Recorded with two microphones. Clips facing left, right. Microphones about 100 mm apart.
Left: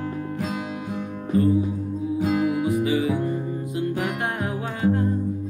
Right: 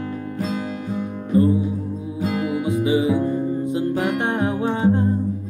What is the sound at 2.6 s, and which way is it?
Music, 25° right (ahead or behind).